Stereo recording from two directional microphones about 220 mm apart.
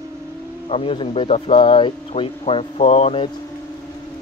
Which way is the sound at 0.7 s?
25° left (ahead or behind).